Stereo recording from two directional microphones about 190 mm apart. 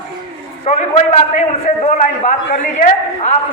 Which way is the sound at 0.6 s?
35° left (ahead or behind).